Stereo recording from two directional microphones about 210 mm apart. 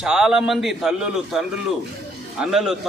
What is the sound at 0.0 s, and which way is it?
A man's voice, 5° right (ahead or behind).